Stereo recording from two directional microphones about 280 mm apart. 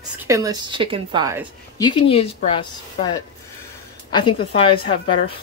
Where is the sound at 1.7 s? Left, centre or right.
Centre.